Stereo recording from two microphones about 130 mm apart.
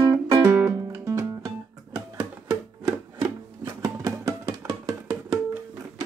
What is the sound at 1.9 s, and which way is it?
Rub, 25° right (ahead or behind).